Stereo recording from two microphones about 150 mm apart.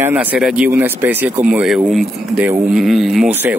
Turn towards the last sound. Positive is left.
turn(degrees=-15)  # may be behind; listen again after turning